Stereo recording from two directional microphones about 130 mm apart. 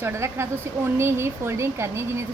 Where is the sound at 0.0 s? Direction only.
20° right (ahead or behind).